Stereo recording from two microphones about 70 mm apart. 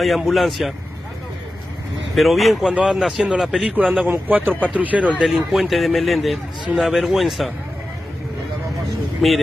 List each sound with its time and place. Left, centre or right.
0.2 s a man's voice: centre
2.1 s a man's voice: centre
2.7 s speech: centre
3.0 s a man's voice: centre
3.7 s speech: centre
5.2 s a man's voice: centre
9.2 s a man's voice: centre